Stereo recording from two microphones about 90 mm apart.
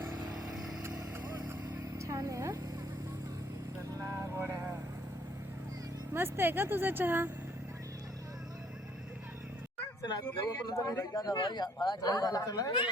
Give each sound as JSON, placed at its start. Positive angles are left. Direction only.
{"t": 0.5, "sound": "vehicle", "side_deg": -5}
{"t": 2.0, "sound": "a sound", "side_deg": -35}
{"t": 3.9, "sound": "vehicle", "side_deg": -30}
{"t": 6.1, "sound": "speech", "side_deg": -25}
{"t": 10.8, "sound": "a man's voice", "side_deg": 30}